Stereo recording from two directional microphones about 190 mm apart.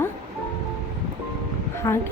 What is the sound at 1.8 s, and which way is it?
Speech, 15° left (ahead or behind).